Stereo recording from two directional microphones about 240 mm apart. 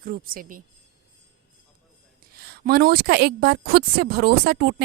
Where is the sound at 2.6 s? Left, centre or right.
Right.